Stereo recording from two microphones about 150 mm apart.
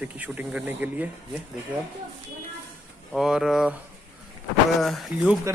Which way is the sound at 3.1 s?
5° right (ahead or behind).